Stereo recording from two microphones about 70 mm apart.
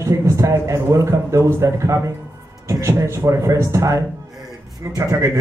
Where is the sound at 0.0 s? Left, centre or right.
Right.